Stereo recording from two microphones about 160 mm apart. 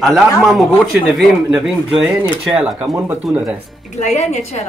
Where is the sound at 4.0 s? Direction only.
45° left (ahead or behind).